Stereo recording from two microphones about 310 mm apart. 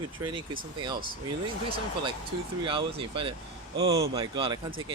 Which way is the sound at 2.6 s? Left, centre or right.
Centre.